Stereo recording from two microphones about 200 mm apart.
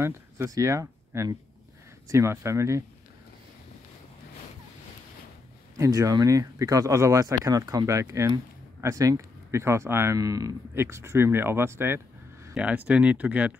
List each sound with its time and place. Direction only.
0.0 s speech: 15° right (ahead or behind)
5.8 s speech: 15° right (ahead or behind)